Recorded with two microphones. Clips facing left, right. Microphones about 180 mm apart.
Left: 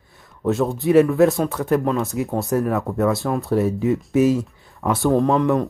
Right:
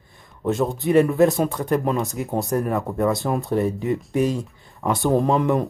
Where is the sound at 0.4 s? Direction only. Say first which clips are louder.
Left 2 dB; centre (ahead or behind).